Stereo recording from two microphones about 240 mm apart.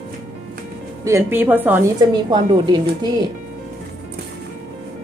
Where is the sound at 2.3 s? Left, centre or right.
Centre.